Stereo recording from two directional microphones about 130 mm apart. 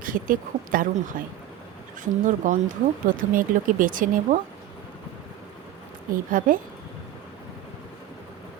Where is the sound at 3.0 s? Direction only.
90° right.